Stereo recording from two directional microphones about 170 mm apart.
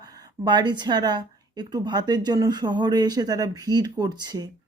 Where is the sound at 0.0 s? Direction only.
20° right (ahead or behind).